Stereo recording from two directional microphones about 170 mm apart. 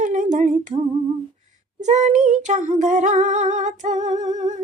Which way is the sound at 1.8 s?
45° right (ahead or behind).